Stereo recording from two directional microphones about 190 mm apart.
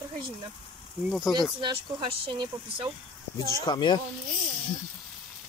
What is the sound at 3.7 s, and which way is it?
Speech, 25° left (ahead or behind).